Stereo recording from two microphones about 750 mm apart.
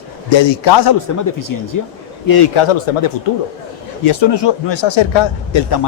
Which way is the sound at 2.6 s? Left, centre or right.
Left.